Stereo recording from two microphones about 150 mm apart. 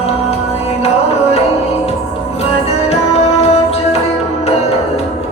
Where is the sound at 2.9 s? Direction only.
45° left (ahead or behind).